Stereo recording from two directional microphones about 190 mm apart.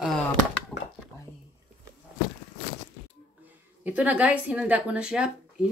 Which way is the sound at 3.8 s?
5° right (ahead or behind).